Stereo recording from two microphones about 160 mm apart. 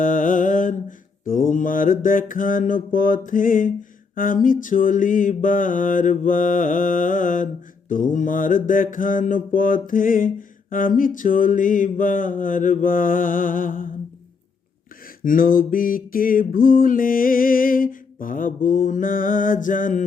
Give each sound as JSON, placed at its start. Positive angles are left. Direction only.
{"t": 0.0, "sound": "mantra", "side_deg": 55}
{"t": 15.2, "sound": "mantra", "side_deg": 60}